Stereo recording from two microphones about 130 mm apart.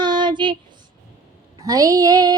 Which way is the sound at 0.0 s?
35° right (ahead or behind).